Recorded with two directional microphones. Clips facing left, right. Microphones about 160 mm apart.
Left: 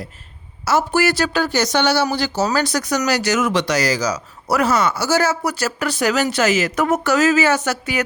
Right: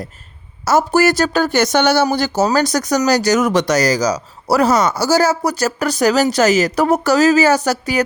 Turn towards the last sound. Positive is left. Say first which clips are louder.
# right 4 dB
turn(degrees=-35)  # may be behind; listen again after turning